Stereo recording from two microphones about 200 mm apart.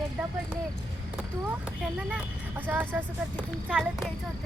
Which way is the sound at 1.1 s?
5° right (ahead or behind).